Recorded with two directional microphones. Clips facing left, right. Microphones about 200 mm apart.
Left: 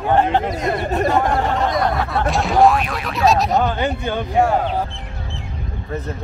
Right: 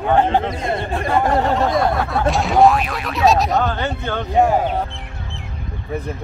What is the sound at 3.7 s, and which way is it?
Speech, 15° left (ahead or behind).